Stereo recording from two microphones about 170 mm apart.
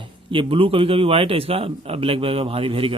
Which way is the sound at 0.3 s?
30° right (ahead or behind).